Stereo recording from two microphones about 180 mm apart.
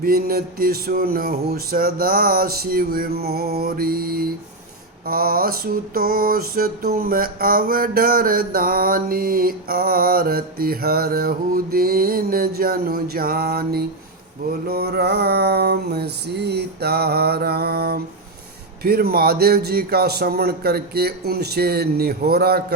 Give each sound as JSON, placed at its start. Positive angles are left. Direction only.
{"t": 0.0, "sound": "mantra", "side_deg": -55}